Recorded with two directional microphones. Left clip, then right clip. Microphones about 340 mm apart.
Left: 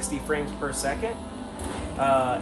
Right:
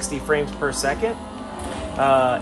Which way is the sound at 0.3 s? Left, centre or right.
Right.